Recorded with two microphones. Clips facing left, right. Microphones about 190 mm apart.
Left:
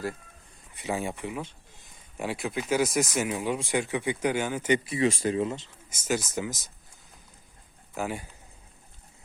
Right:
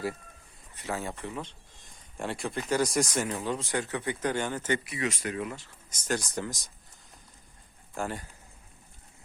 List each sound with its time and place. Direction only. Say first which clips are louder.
0.7 s speech: left 4 dB; 15° left (ahead or behind)
4.8 s speech: left 7 dB; 30° left (ahead or behind)
5.9 s speech: left 3 dB; 5° left (ahead or behind)
7.9 s speech: left 2 dB; 10° left (ahead or behind)